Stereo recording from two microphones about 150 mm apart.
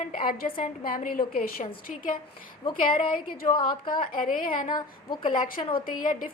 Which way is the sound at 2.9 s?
35° left (ahead or behind).